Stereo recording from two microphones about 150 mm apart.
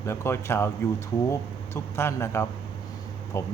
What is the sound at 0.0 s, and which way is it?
A man's voice, 20° left (ahead or behind).